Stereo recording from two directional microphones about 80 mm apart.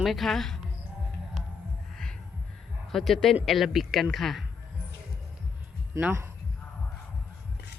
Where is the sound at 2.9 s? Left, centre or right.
Centre.